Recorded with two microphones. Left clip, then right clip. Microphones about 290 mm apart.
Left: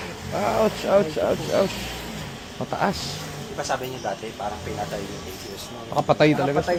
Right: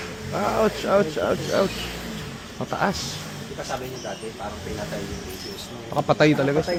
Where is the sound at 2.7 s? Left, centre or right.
Centre.